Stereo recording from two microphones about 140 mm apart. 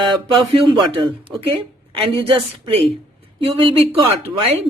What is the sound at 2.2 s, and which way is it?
Speech, 45° right (ahead or behind).